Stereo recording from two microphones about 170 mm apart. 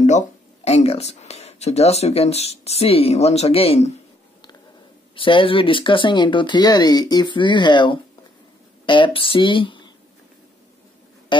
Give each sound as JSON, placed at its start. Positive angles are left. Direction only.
{"t": 0.7, "sound": "speech", "side_deg": 40}
{"t": 5.1, "sound": "speech", "side_deg": 30}